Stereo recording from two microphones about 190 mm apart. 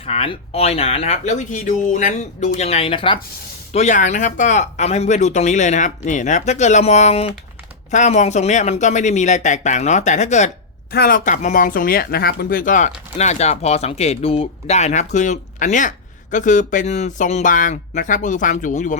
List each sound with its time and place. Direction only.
0.0 s speech: 30° left (ahead or behind)
10.9 s speech: 50° left (ahead or behind)